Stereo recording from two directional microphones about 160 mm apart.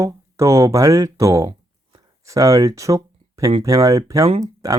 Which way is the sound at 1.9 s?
20° right (ahead or behind).